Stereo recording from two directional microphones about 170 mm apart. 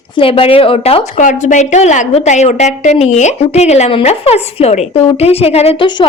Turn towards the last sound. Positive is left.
turn(degrees=30)  # may be behind; listen again after turning